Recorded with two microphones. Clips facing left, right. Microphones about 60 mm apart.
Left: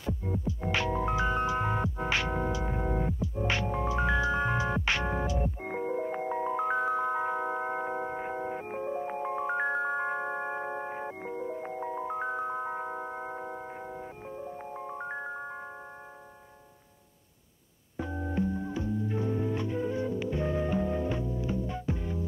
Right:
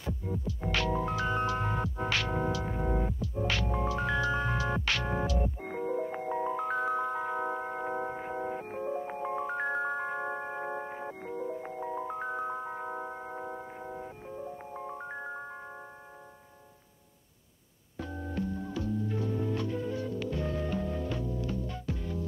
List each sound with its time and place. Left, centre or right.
0.5 s music: left
3.4 s music: left
12.1 s music: centre
17.9 s music: centre